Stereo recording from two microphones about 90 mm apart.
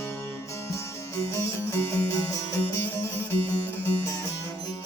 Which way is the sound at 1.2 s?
30° left (ahead or behind).